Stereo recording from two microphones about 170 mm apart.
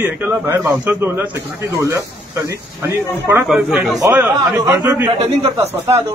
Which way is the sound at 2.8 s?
15° right (ahead or behind).